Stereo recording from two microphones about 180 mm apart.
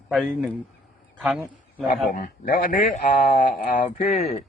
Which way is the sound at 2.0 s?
50° left (ahead or behind).